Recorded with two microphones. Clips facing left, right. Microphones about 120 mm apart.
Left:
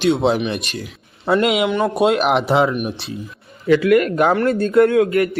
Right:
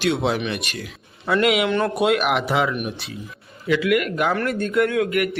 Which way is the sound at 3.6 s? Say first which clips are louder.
Left 6 dB; 45° left (ahead or behind).